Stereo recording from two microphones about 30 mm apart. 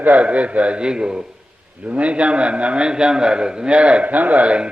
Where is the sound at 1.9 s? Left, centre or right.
Right.